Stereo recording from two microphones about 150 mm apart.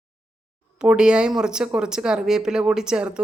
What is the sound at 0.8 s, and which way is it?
Speech, 5° right (ahead or behind).